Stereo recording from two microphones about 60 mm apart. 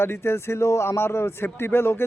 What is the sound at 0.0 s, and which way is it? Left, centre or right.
Speech, left.